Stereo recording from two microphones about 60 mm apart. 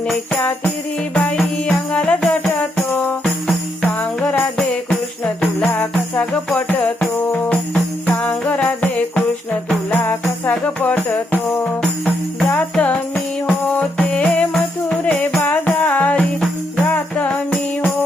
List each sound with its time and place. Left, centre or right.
1.1 s music: centre
4.2 s jingle bell: left
6.7 s music: left
7.3 s jingle bell: left
9.9 s music: left
12.7 s music: centre